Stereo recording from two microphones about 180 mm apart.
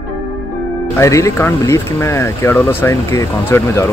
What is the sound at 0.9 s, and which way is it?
Speech, 15° left (ahead or behind).